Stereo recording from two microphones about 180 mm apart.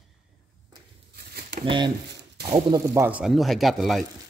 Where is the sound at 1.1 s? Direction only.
60° right (ahead or behind).